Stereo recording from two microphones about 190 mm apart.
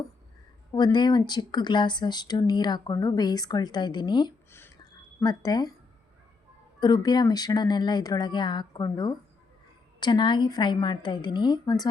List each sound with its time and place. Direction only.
0.7 s speech: 20° left (ahead or behind)
4.5 s a sound: 15° left (ahead or behind)
6.7 s speech: 20° left (ahead or behind)